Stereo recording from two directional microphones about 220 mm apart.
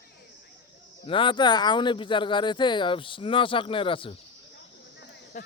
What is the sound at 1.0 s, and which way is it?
Speech, 20° left (ahead or behind).